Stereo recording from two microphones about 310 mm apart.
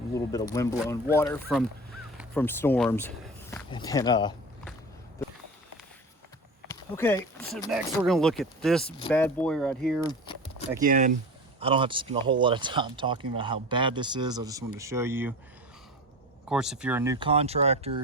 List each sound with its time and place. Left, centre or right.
0.1 s speech: centre
6.7 s speech: centre
10.0 s a sound: centre
10.8 s speech: right; by 15.4 s centre
16.5 s speech: centre